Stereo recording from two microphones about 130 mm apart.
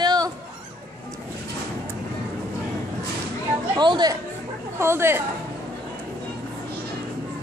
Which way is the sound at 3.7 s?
35° right (ahead or behind).